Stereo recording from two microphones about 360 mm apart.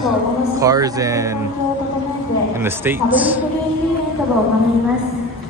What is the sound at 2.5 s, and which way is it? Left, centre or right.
Speech, centre.